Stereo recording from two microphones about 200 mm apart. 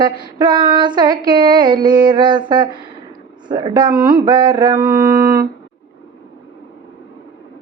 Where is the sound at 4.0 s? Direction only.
20° right (ahead or behind).